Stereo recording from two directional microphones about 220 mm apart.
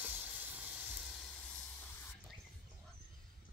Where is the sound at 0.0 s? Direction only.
5° right (ahead or behind).